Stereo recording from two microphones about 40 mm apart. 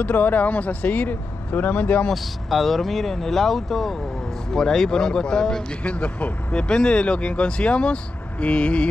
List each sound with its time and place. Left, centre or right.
0.0 s speech: left
2.5 s speech: centre
5.9 s speech: left